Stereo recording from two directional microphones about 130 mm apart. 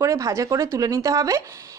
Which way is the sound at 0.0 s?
25° right (ahead or behind).